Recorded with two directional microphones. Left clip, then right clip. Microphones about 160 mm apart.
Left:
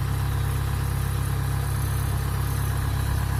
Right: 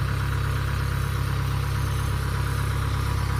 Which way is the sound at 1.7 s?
15° left (ahead or behind).